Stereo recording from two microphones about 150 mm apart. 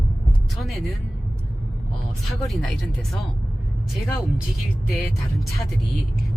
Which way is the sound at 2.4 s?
Centre (ahead or behind).